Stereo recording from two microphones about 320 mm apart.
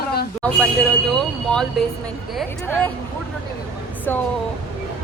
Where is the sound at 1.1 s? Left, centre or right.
Centre.